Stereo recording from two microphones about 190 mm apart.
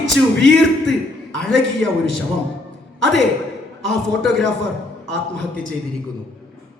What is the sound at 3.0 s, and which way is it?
A man's voice, centre (ahead or behind).